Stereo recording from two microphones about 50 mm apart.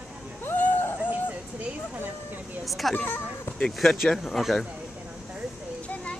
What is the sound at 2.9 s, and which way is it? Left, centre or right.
Speech, left.